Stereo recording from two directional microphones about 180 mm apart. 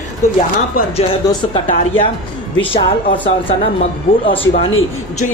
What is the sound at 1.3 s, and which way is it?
Speech, 25° left (ahead or behind).